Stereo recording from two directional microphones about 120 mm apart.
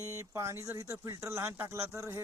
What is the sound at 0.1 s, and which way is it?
Speech, 25° right (ahead or behind).